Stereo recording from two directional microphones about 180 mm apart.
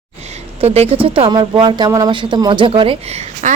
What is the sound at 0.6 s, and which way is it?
Speech, 35° right (ahead or behind).